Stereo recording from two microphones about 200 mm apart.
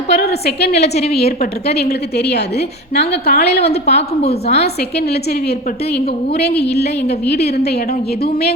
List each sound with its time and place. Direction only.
0.1 s a woman's voice: 55° left (ahead or behind)
1.9 s a woman's voice: 55° left (ahead or behind)
4.2 s a woman's voice: 30° left (ahead or behind)
4.8 s a woman's voice: 55° left (ahead or behind)